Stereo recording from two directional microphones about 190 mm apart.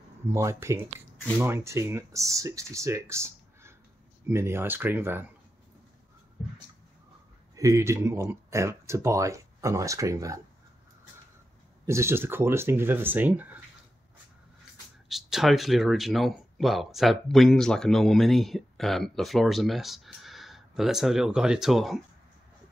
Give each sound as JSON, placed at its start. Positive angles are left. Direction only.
{"t": 0.3, "sound": "speech", "side_deg": -15}
{"t": 7.5, "sound": "speech", "side_deg": -15}
{"t": 11.8, "sound": "speech", "side_deg": -15}
{"t": 15.0, "sound": "speech", "side_deg": 0}